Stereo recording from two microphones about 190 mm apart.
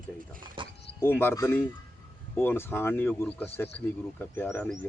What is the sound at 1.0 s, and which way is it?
Speech, 10° left (ahead or behind).